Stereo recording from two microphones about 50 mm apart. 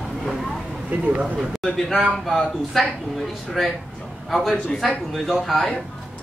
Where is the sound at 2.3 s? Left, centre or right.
Centre.